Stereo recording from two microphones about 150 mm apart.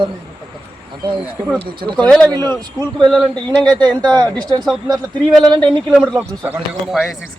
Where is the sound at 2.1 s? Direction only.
5° left (ahead or behind).